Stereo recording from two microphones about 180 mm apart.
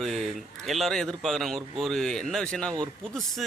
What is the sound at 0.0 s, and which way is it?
A man's voice, centre (ahead or behind).